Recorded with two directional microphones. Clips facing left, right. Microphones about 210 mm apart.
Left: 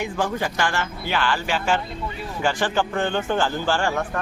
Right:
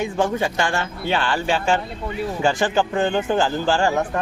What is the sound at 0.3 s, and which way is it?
Speech, 25° right (ahead or behind).